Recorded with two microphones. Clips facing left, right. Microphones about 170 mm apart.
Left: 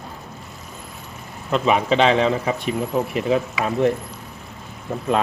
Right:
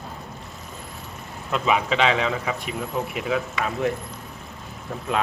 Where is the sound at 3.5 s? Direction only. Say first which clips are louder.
Left 5 dB; centre (ahead or behind).